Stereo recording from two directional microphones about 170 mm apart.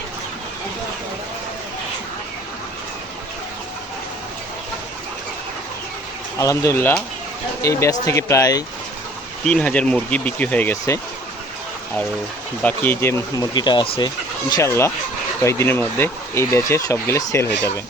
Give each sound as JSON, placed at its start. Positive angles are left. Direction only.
{"t": 6.4, "sound": "speech", "side_deg": 20}
{"t": 9.4, "sound": "speech", "side_deg": 5}
{"t": 12.6, "sound": "speech", "side_deg": 10}
{"t": 13.5, "sound": "speech", "side_deg": 25}